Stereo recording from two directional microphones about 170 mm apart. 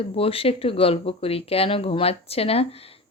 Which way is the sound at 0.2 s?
35° left (ahead or behind).